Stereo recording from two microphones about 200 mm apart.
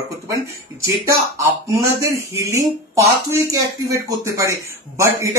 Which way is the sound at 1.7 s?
15° right (ahead or behind).